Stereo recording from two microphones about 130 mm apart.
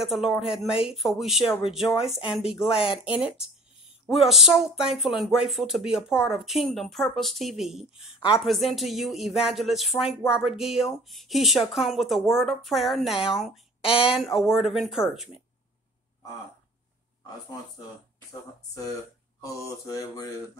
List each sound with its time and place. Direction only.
0.1 s speech: 5° right (ahead or behind)
2.6 s speech: 50° left (ahead or behind)
4.0 s speech: centre (ahead or behind)
19.4 s mantra: 25° left (ahead or behind)